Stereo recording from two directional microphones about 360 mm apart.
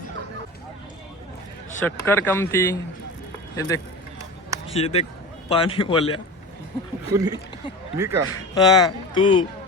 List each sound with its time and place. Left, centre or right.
1.8 s speech: centre
7.1 s speech: centre
8.3 s speech: centre